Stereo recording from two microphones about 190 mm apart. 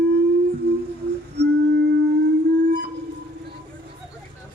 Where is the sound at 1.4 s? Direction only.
60° right (ahead or behind).